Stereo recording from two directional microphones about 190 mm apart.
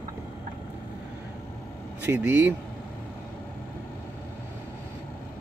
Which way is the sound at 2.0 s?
10° right (ahead or behind).